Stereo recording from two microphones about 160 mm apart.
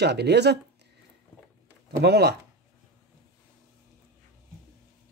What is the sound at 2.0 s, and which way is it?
Speech, 90° right.